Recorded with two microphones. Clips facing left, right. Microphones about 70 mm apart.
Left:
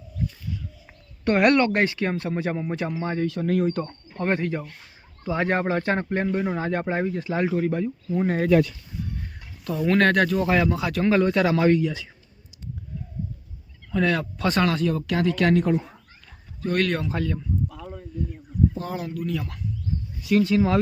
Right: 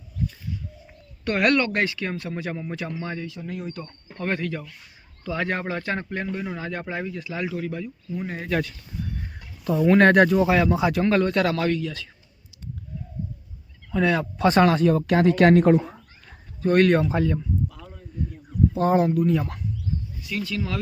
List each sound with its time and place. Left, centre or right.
1.2 s speech: left
3.2 s speech: left
3.8 s speech: left
9.6 s speech: centre
10.4 s speech: centre
10.8 s speech: centre
11.0 s speech: centre
11.5 s speech: centre
13.9 s speech: centre
14.3 s speech: right
16.6 s speech: right
18.8 s speech: right
20.4 s speech: left